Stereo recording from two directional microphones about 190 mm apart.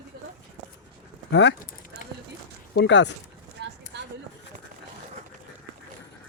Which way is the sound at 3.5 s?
65° right (ahead or behind).